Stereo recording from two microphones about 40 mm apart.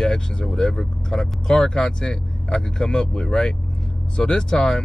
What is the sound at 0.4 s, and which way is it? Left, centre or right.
Speech, centre.